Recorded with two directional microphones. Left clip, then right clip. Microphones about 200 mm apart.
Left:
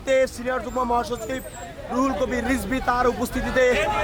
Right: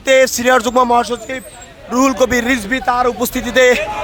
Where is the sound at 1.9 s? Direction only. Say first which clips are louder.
Right 10 dB; 45° right (ahead or behind).